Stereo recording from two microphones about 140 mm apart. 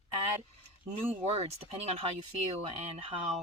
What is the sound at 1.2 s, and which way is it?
A woman's voice, 45° right (ahead or behind).